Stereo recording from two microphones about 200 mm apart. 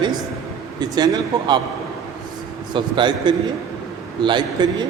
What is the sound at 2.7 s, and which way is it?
A man's voice, 25° right (ahead or behind).